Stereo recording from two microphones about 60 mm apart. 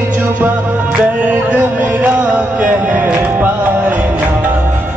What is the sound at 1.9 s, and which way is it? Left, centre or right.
Music, right.